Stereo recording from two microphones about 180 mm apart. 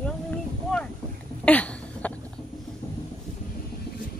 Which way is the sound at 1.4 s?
10° left (ahead or behind).